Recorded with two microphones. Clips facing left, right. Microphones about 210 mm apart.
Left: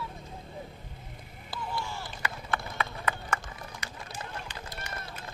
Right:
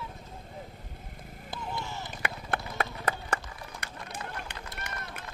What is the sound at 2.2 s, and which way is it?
Run, 50° right (ahead or behind).